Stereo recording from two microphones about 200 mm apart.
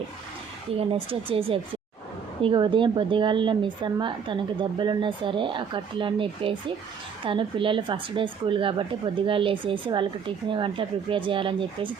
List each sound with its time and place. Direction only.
0.8 s speech: 25° right (ahead or behind)